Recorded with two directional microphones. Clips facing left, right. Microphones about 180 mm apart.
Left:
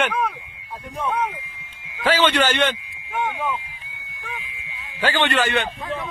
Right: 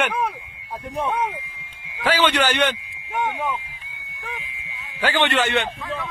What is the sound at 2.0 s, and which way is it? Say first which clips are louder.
Speech: left 1 dB; 10° right (ahead or behind).